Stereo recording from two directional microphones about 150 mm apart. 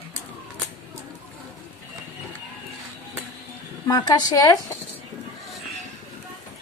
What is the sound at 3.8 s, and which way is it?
Speech, 25° left (ahead or behind).